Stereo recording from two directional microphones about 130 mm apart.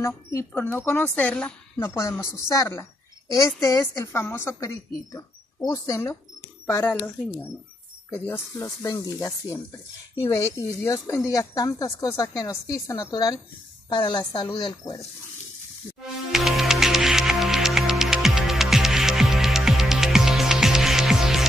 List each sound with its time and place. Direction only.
0.0 s a woman's voice: 25° left (ahead or behind)
1.8 s a woman's voice: 25° left (ahead or behind)
16.3 s music: centre (ahead or behind)